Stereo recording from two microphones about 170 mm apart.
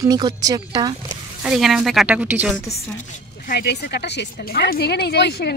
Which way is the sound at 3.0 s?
50° left (ahead or behind).